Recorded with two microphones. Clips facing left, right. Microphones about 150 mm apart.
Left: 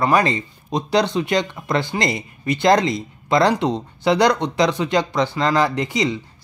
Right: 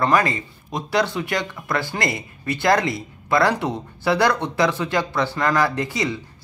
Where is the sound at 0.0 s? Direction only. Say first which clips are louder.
Left 2 dB; 20° left (ahead or behind).